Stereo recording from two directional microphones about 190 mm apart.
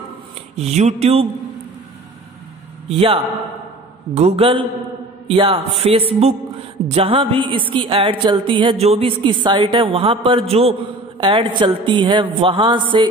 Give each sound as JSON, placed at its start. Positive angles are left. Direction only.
{"t": 0.6, "sound": "music", "side_deg": -35}
{"t": 2.9, "sound": "speech", "side_deg": -30}
{"t": 4.1, "sound": "music", "side_deg": -35}
{"t": 6.9, "sound": "speech", "side_deg": -30}